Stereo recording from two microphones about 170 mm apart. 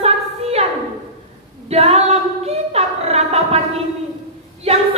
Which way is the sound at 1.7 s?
40° right (ahead or behind).